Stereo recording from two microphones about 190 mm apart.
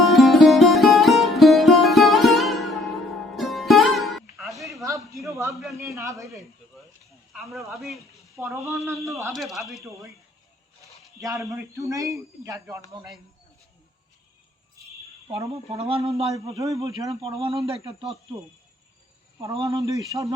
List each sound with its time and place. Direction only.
0.0 s music: centre (ahead or behind)
4.7 s a sound: 15° right (ahead or behind)
5.7 s speech: 15° right (ahead or behind)
7.3 s speech: centre (ahead or behind)
8.4 s speech: 15° right (ahead or behind)
9.3 s speech: centre (ahead or behind)
11.9 s speech: 15° right (ahead or behind)
15.3 s speech: 30° right (ahead or behind)
16.3 s speech: 15° right (ahead or behind)
17.4 s speech: 30° right (ahead or behind)
19.4 s speech: 15° right (ahead or behind)